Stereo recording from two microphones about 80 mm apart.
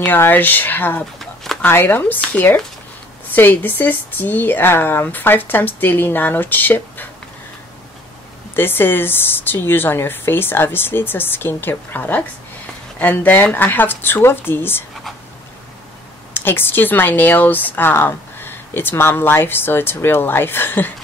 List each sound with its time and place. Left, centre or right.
0.0 s speech: left
8.5 s speech: left
16.3 s speech: left